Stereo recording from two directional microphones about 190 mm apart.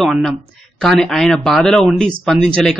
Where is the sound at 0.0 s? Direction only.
Centre (ahead or behind).